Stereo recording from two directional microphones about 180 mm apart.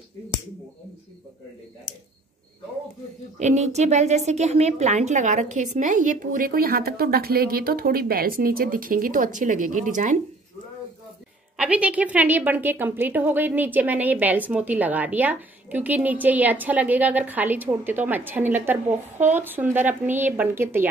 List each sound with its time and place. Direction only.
3.3 s a woman's voice: 40° right (ahead or behind)
11.5 s a woman's voice: 5° right (ahead or behind)
18.9 s speech: 40° right (ahead or behind)
19.3 s a woman's voice: 10° right (ahead or behind)